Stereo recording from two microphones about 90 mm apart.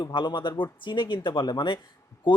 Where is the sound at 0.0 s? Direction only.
60° left (ahead or behind).